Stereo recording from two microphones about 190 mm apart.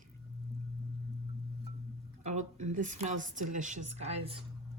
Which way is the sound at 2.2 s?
40° right (ahead or behind).